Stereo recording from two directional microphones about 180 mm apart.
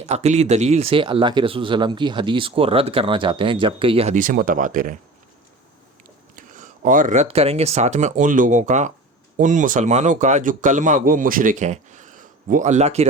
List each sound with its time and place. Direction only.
0.0 s speech: 35° right (ahead or behind)
6.3 s speech: 45° right (ahead or behind)